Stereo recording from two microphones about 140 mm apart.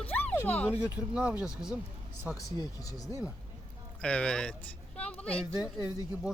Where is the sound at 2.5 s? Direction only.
25° left (ahead or behind).